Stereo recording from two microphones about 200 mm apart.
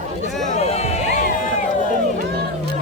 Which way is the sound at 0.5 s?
30° left (ahead or behind).